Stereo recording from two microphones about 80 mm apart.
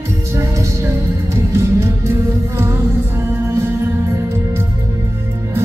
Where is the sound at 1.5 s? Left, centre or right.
Right.